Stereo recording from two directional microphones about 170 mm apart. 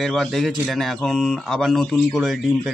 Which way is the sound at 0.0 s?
Centre (ahead or behind).